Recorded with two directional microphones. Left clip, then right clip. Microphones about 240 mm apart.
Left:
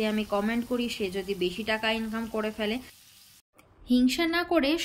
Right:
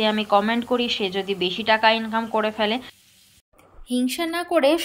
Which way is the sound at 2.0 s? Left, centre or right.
Centre.